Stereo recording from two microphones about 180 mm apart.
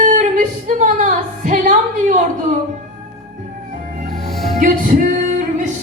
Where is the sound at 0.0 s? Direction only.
45° right (ahead or behind).